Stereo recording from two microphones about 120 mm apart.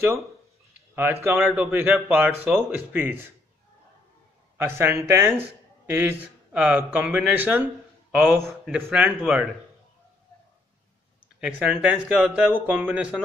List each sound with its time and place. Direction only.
0.9 s speech: 20° right (ahead or behind)
4.6 s a man's voice: 20° right (ahead or behind)
8.5 s speech: 5° right (ahead or behind)
11.4 s speech: 10° right (ahead or behind)